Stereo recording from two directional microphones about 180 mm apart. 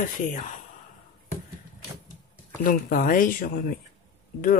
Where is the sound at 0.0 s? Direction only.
45° left (ahead or behind).